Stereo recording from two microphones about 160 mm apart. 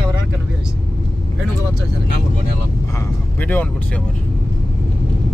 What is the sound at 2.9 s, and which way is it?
Speech, 10° left (ahead or behind).